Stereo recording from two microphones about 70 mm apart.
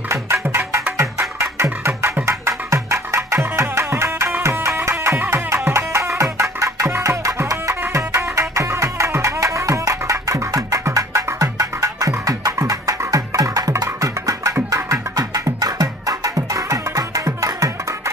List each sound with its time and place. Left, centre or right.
0.1 s music: right
7.8 s music: right